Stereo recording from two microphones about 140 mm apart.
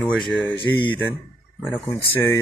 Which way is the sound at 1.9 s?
20° left (ahead or behind).